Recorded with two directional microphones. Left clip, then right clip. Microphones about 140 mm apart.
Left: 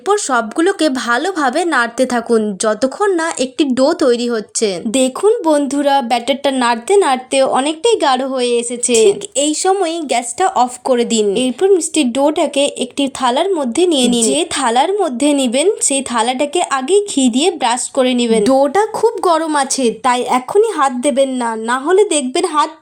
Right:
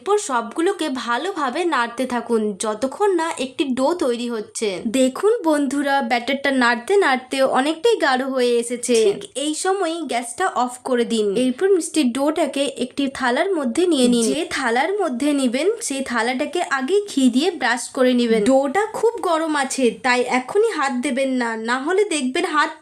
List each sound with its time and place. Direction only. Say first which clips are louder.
0.1 s a woman's voice: left 5 dB; 35° left (ahead or behind)
8.9 s a woman's voice: left 6 dB; 35° left (ahead or behind)